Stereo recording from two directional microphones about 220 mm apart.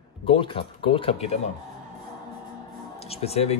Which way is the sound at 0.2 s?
25° left (ahead or behind).